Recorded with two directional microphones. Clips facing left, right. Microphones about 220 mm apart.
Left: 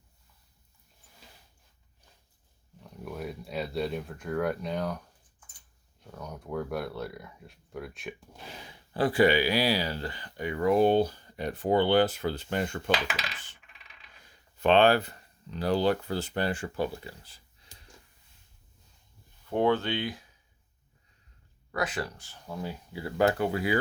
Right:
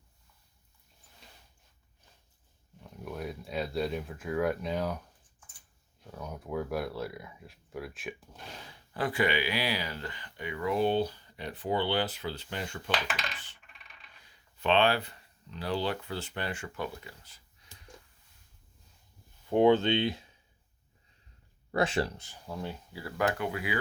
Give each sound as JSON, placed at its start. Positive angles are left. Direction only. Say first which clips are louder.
{"t": 2.8, "sound": "speech", "louder": "left 1 dB", "side_deg": 0}
{"t": 8.9, "sound": "speech", "louder": "left 6 dB", "side_deg": 30}
{"t": 14.3, "sound": "speech", "louder": "left 5 dB", "side_deg": 45}
{"t": 19.5, "sound": "speech", "louder": "right 3 dB", "side_deg": -15}
{"t": 21.7, "sound": "speech", "louder": "right 3 dB", "side_deg": -30}
{"t": 22.4, "sound": "speech", "louder": "left 1 dB", "side_deg": 0}
{"t": 22.9, "sound": "speech", "louder": "left 5 dB", "side_deg": 20}
{"t": 23.2, "sound": "speech", "louder": "left 5 dB", "side_deg": 35}